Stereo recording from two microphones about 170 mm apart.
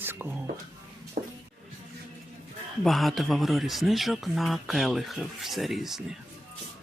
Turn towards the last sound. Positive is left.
turn(degrees=0)  # may be behind; listen again after turning